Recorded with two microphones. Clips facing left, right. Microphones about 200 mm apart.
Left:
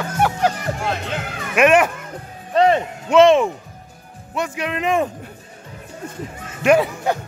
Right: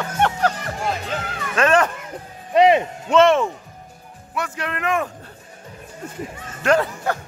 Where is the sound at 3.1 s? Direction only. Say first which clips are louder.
Left 3 dB; 15° left (ahead or behind).